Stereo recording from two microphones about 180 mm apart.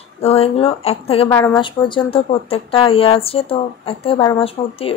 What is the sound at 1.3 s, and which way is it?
Speech, 15° left (ahead or behind).